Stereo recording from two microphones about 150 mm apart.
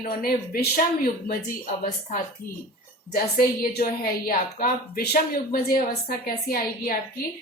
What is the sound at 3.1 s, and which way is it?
Speech, 80° left.